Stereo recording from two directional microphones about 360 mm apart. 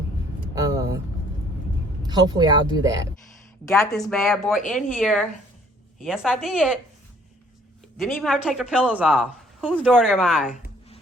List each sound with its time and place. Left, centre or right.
0.5 s vehicle: centre
2.0 s speech: centre
7.9 s speech: centre
10.5 s a sound: centre